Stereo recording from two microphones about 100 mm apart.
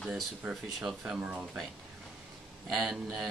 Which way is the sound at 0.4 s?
15° right (ahead or behind).